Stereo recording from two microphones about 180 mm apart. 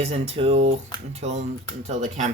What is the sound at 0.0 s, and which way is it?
Speech, 35° right (ahead or behind).